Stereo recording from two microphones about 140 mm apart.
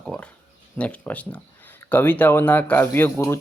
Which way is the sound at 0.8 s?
10° left (ahead or behind).